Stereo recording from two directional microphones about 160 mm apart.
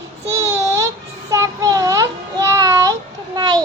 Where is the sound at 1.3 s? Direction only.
20° right (ahead or behind).